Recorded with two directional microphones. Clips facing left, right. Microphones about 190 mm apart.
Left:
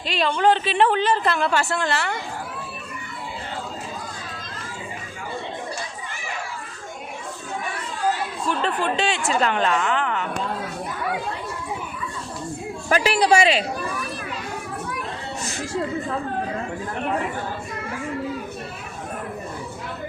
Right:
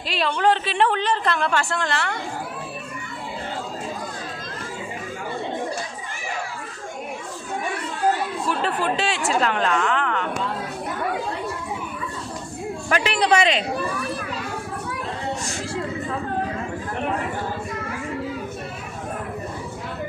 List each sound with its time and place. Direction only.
0.1 s a woman's voice: centre (ahead or behind)
8.4 s a woman's voice: 5° right (ahead or behind)
12.9 s speech: 35° left (ahead or behind)
13.1 s speech: 10° left (ahead or behind)